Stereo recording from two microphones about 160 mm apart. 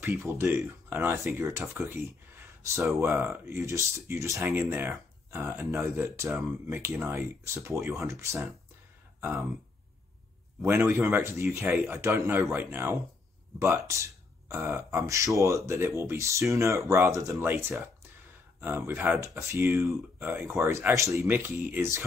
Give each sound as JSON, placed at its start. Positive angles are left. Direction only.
{"t": 0.0, "sound": "speech", "side_deg": -15}
{"t": 10.6, "sound": "speech", "side_deg": -15}